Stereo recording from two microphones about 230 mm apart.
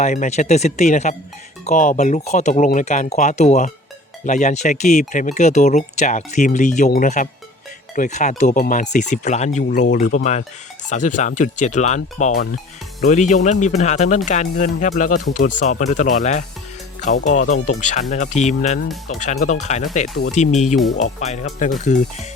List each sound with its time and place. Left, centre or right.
0.0 s speech: left